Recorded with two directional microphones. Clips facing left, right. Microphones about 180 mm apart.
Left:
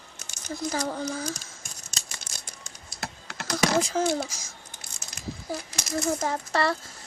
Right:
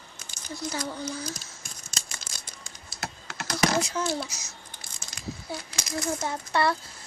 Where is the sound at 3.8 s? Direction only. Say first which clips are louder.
Left 3 dB; 90° left.